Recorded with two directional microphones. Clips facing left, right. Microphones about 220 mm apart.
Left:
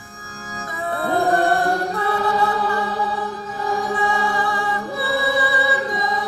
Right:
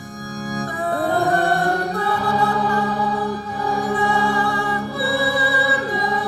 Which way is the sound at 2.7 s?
35° right (ahead or behind).